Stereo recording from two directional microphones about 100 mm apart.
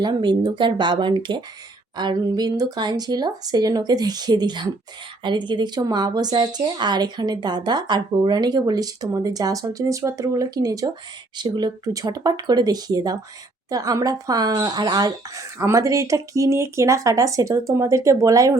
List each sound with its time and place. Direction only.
0.0 s a woman's voice: 50° right (ahead or behind)
11.5 s speech: 45° right (ahead or behind)